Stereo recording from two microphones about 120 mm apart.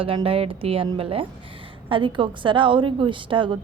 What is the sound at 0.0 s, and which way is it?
A woman's voice, 50° right (ahead or behind).